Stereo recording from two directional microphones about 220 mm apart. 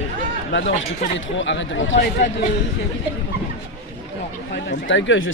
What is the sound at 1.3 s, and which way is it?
Speech, 55° left (ahead or behind).